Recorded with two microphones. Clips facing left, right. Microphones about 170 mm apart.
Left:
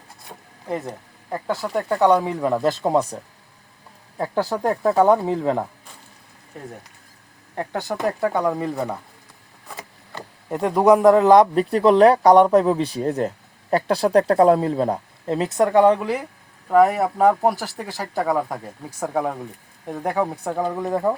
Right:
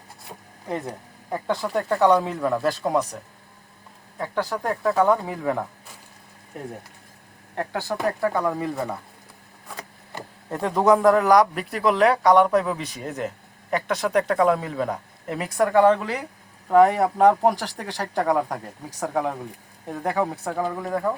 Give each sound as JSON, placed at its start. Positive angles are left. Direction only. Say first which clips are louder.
{"t": 0.3, "sound": "a sound", "louder": "left 2 dB", "side_deg": 0}
{"t": 1.3, "sound": "speech", "louder": "left 1 dB", "side_deg": 0}
{"t": 4.2, "sound": "speech", "louder": "left 4 dB", "side_deg": 30}
{"t": 7.7, "sound": "speech", "louder": "left 2 dB", "side_deg": 20}
{"t": 10.5, "sound": "speech", "louder": "left 3 dB", "side_deg": 10}